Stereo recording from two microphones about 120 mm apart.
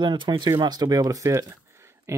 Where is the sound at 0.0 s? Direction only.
40° right (ahead or behind).